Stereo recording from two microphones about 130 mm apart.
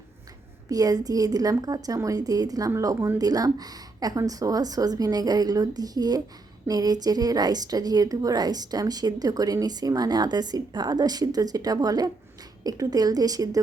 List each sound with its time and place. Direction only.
0.7 s a woman's voice: 30° right (ahead or behind)